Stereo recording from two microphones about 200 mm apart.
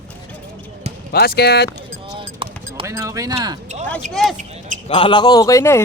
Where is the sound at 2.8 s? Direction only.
15° right (ahead or behind).